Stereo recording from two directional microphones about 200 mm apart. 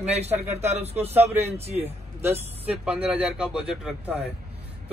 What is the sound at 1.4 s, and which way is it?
Speech, 30° right (ahead or behind).